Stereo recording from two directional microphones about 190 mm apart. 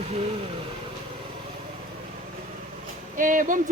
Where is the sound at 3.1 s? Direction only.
45° right (ahead or behind).